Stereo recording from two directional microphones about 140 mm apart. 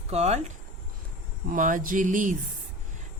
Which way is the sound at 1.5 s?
70° right (ahead or behind).